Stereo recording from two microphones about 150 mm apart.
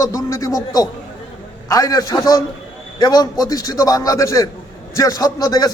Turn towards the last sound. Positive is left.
turn(degrees=25)  # may be behind; listen again after turning